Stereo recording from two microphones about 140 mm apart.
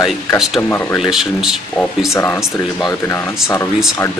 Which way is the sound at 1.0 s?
Centre (ahead or behind).